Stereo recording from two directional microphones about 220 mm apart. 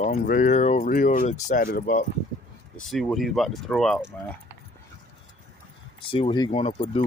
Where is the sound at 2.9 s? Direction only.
Centre (ahead or behind).